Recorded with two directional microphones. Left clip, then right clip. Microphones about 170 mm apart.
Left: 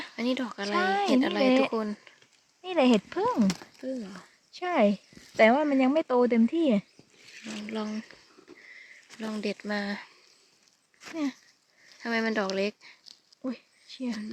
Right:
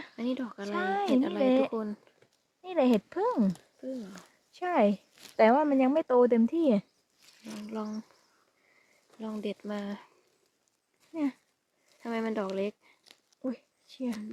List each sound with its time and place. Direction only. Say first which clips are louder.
0.2 s speech: left 4 dB; 10° left (ahead or behind)
2.6 s speech: left 3 dB; 20° left (ahead or behind)
4.5 s speech: left 1 dB; 5° right (ahead or behind)
7.4 s speech: left 3 dB; 10° left (ahead or behind)
9.2 s speech: left 3 dB; 5° left (ahead or behind)
12.0 s speech: left 5 dB; 5° left (ahead or behind)
13.1 s a sound: even; 15° right (ahead or behind)